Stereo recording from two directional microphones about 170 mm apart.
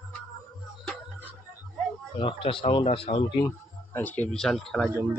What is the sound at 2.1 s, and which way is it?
Speech, 30° left (ahead or behind).